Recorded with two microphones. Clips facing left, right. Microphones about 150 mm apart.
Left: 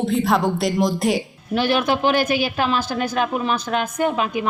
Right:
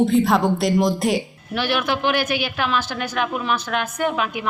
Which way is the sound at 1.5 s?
30° left (ahead or behind).